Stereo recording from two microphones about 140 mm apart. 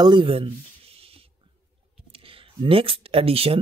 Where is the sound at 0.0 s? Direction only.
35° right (ahead or behind).